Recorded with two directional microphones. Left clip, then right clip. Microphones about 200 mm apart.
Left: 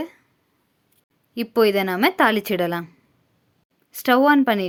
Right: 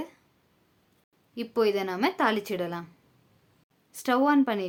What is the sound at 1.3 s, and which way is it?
Speech, 35° left (ahead or behind).